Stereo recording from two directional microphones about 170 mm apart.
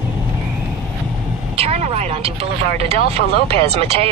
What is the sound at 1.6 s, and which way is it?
Speech, 40° right (ahead or behind).